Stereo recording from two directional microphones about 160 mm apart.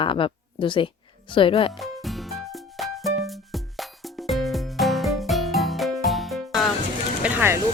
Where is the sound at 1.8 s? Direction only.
Centre (ahead or behind).